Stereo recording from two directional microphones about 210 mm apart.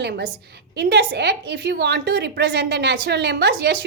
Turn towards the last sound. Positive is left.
turn(degrees=-55)  # may be behind; listen again after turning